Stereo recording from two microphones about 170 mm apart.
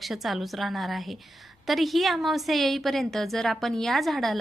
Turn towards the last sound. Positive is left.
turn(degrees=0)  # may be behind; listen again after turning